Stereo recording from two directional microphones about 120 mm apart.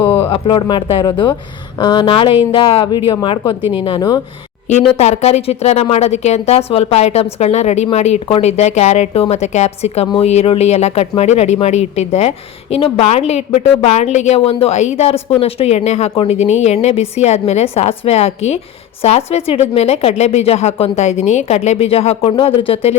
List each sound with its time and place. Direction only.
0.3 s a woman's voice: 45° left (ahead or behind)
4.7 s a woman's voice: 70° left (ahead or behind)
12.7 s a woman's voice: 55° left (ahead or behind); by 15.1 s 70° left (ahead or behind)
15.4 s a woman's voice: 55° left (ahead or behind)